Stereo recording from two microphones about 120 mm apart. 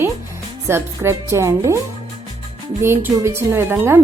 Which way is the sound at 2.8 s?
20° right (ahead or behind).